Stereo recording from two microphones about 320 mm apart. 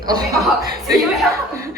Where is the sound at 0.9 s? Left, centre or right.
Centre.